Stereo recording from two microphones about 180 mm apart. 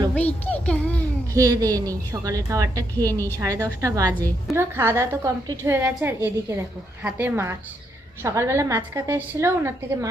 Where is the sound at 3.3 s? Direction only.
20° right (ahead or behind).